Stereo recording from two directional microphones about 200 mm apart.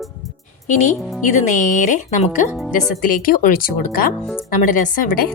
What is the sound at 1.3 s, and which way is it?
A woman's voice, 40° left (ahead or behind).